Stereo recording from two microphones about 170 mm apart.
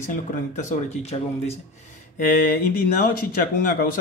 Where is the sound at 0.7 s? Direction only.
40° left (ahead or behind).